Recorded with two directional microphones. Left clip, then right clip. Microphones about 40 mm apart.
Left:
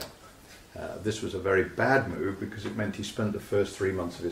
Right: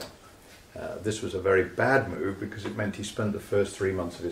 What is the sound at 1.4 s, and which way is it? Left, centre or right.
Speech, centre.